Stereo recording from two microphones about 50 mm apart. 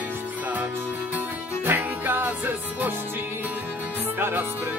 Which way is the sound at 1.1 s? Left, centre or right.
Right.